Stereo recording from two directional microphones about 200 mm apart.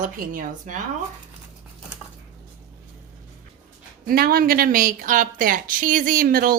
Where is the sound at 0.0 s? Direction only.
45° right (ahead or behind).